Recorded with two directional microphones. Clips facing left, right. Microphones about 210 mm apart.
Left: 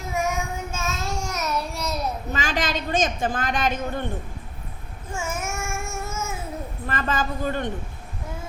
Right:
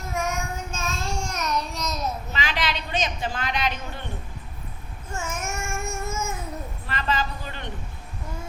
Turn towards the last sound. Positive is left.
turn(degrees=50)  # may be behind; listen again after turning